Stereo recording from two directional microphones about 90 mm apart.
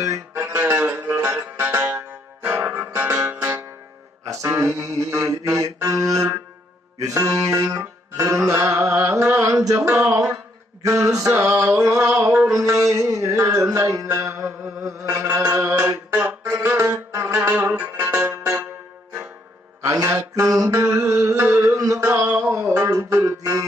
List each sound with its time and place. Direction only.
0.0 s music: 35° right (ahead or behind)
9.9 s a sound: 30° right (ahead or behind)
12.3 s music: 10° right (ahead or behind)
12.7 s music: 35° right (ahead or behind); by 18.7 s 15° right (ahead or behind)
19.8 s a sound: 30° right (ahead or behind)
22.5 s music: 35° right (ahead or behind)